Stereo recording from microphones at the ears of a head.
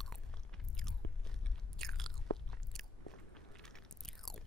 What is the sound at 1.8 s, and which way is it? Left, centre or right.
Chewing, right.